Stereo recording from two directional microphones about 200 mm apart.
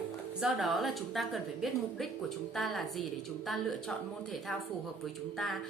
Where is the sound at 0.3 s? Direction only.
Centre (ahead or behind).